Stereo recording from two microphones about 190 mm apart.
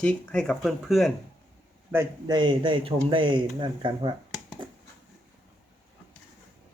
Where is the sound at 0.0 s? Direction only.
5° left (ahead or behind).